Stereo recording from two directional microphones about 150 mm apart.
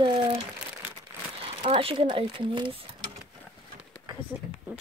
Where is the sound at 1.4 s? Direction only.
40° right (ahead or behind).